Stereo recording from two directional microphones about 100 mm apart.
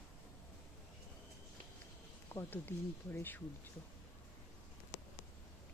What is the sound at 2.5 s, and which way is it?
Speech, 20° left (ahead or behind).